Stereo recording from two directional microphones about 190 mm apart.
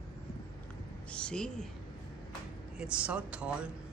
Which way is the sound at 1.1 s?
5° left (ahead or behind).